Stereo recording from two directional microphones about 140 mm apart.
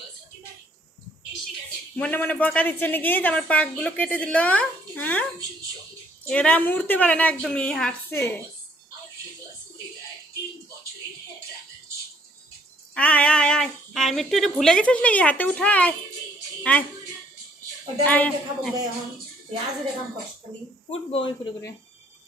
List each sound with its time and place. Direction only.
2.0 s a woman's voice: 10° left (ahead or behind)
8.1 s a woman's voice: 20° left (ahead or behind)
12.9 s a woman's voice: 10° left (ahead or behind)
18.0 s a woman's voice: 10° left (ahead or behind)
20.9 s speech: 40° left (ahead or behind)